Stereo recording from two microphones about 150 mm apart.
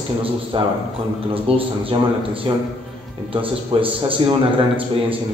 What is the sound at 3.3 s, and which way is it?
A man's voice, 35° right (ahead or behind).